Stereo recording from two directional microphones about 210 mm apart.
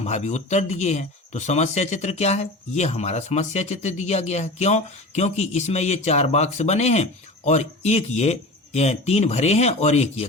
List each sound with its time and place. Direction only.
0.0 s speech: 30° left (ahead or behind)